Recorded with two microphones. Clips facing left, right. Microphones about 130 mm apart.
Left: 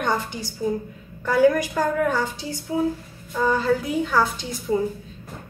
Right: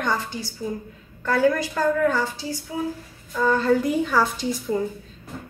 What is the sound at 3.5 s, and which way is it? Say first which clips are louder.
A woman's voice: right 2 dB; centre (ahead or behind).